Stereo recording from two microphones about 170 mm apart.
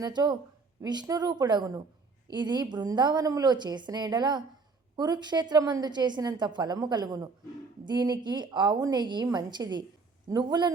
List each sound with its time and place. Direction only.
0.0 s a woman's voice: 25° right (ahead or behind)